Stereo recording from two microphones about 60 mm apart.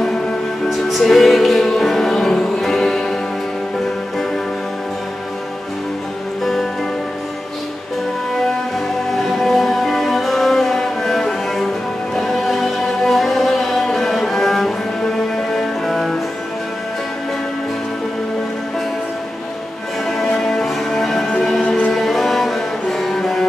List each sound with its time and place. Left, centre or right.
0.7 s music: centre
6.4 s music: centre
9.1 s music: centre
20.4 s music: centre
21.6 s music: left
21.9 s music: centre